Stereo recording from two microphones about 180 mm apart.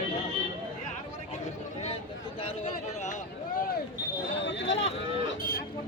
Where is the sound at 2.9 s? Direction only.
40° left (ahead or behind).